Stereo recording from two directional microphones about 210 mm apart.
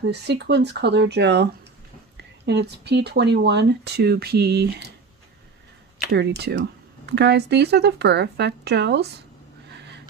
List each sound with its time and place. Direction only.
0.1 s speech: 55° right (ahead or behind)
6.1 s speech: 55° right (ahead or behind)